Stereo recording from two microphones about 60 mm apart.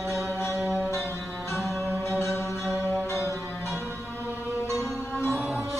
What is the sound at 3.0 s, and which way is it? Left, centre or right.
Music, left.